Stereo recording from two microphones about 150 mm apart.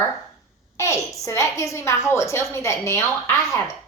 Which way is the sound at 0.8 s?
20° left (ahead or behind).